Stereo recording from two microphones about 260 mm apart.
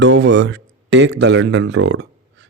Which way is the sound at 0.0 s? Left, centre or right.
Right.